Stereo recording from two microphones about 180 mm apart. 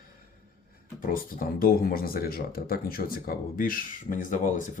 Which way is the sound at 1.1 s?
50° left (ahead or behind).